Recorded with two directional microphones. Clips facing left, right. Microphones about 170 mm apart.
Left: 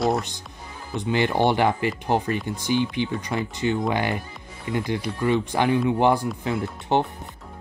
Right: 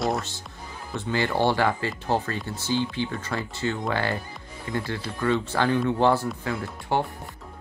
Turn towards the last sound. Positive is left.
turn(degrees=20)  # may be behind; listen again after turning